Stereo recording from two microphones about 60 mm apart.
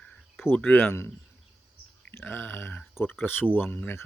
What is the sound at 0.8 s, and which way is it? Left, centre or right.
Speech, left.